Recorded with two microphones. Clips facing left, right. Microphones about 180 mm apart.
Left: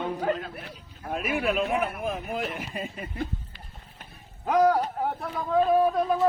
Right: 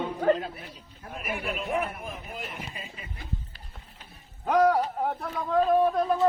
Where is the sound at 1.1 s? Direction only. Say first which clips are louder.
Left 7 dB; 90° left.